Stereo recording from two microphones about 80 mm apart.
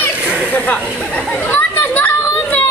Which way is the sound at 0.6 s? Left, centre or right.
Left.